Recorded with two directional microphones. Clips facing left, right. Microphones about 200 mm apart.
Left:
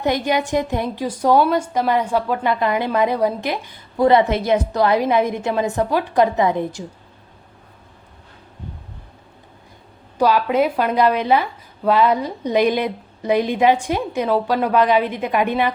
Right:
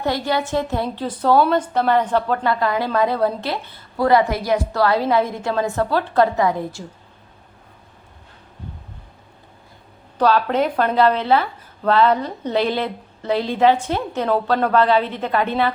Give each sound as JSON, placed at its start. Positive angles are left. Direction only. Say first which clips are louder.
{"t": 0.0, "sound": "a woman's voice", "louder": "left 2 dB", "side_deg": 20}
{"t": 10.2, "sound": "a woman's voice", "louder": "left 1 dB", "side_deg": 10}